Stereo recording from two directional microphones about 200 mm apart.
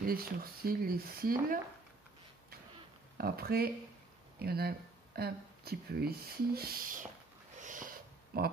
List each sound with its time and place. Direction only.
0.0 s speech: 45° right (ahead or behind)
3.2 s speech: 50° right (ahead or behind)
7.6 s a sound: 40° right (ahead or behind)